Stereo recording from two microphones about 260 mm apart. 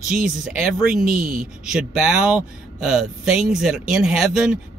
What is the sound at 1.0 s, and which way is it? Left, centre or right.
Speech, right.